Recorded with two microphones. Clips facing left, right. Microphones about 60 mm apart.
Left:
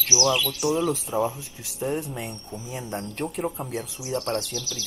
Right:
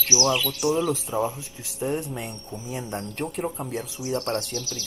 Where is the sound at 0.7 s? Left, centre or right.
Centre.